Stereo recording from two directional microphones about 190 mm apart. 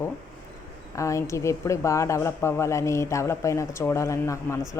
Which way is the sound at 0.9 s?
15° left (ahead or behind).